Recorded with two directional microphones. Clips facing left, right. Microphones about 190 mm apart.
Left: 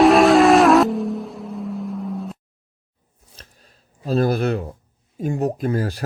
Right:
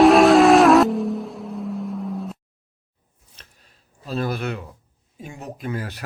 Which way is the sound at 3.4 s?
40° left (ahead or behind).